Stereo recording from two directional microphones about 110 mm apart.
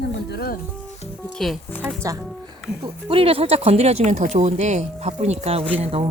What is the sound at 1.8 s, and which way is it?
Speech, 25° right (ahead or behind).